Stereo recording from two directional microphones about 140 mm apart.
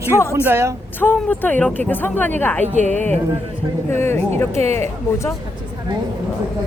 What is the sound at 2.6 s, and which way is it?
Speech, 55° right (ahead or behind).